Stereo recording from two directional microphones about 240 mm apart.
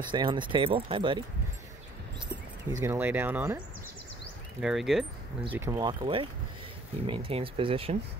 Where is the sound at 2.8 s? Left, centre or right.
Centre.